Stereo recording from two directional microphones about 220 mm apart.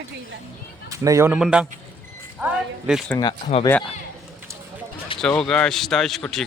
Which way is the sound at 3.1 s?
20° left (ahead or behind).